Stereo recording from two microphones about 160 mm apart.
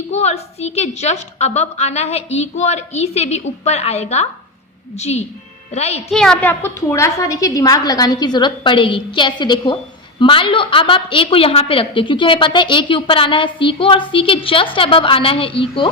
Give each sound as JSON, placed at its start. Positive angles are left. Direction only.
{"t": 0.1, "sound": "a woman's voice", "side_deg": 40}
{"t": 6.1, "sound": "a woman's voice", "side_deg": 5}